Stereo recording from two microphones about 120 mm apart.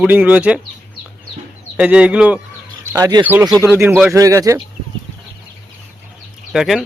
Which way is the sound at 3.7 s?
15° right (ahead or behind).